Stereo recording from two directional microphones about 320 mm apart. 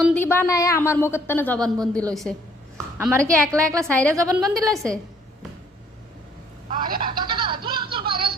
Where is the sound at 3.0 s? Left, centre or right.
Centre.